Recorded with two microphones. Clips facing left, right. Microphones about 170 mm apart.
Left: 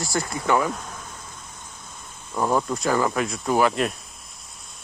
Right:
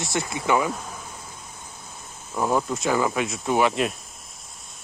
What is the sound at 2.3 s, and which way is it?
Speech, 5° right (ahead or behind).